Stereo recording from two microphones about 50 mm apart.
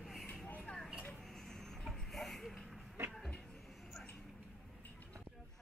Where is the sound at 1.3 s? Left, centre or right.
Centre.